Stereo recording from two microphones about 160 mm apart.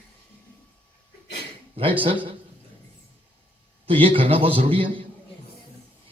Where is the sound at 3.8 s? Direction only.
35° right (ahead or behind).